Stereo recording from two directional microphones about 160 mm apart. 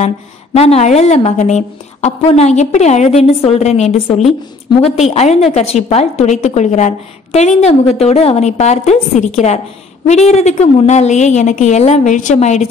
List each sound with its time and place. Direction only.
0.6 s a woman's voice: 40° left (ahead or behind)